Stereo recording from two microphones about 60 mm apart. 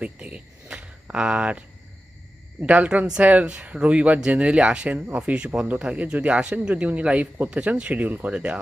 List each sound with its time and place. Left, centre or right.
0.0 s speech: centre